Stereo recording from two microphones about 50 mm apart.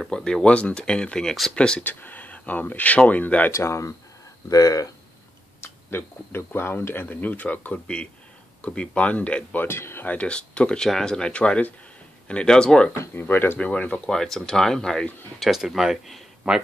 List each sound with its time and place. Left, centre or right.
0.1 s speech: centre
1.8 s speech: left
3.5 s speech: left
5.6 s speech: left
7.1 s speech: left
7.8 s speech: left
9.6 s speech: left
10.0 s speech: left
12.9 s speech: left
13.6 s speech: left
14.1 s speech: centre
15.3 s speech: centre